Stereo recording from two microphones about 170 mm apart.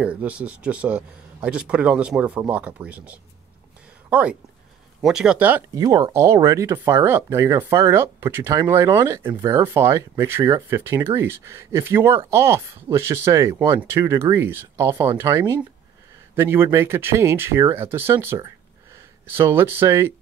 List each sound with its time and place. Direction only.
0.0 s speech: 10° right (ahead or behind)
5.8 s speech: 25° right (ahead or behind)